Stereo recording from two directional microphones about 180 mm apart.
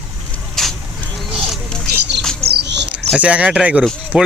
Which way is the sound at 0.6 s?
Centre (ahead or behind).